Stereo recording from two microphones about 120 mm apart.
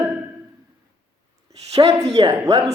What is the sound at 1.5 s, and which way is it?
Speech, 60° right (ahead or behind).